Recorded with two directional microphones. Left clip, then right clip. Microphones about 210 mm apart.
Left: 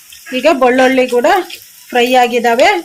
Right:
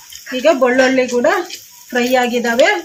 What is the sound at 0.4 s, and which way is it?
Speech, 50° left (ahead or behind).